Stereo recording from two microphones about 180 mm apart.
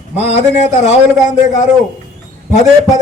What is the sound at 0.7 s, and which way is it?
Speech, 40° left (ahead or behind).